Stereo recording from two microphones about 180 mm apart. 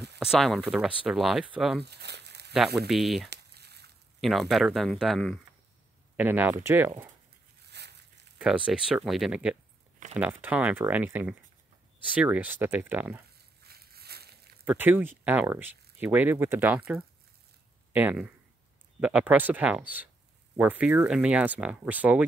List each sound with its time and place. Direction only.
0.2 s speech: centre (ahead or behind)
1.8 s crumpling: 65° right (ahead or behind)
2.5 s speech: centre (ahead or behind)
3.3 s crumpling: 65° right (ahead or behind)
4.2 s speech: centre (ahead or behind)
6.1 s speech: 10° right (ahead or behind)
7.7 s crushing: 70° right (ahead or behind)
8.4 s speech: 5° right (ahead or behind)
13.6 s a sound: 60° right (ahead or behind)
14.6 s speech: 10° right (ahead or behind)